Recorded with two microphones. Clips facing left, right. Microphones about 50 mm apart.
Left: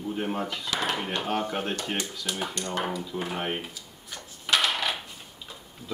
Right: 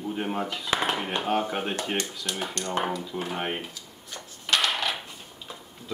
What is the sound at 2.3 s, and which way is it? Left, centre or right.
Speech, centre.